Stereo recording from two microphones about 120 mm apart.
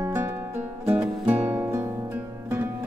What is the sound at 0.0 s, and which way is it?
Music, 20° right (ahead or behind).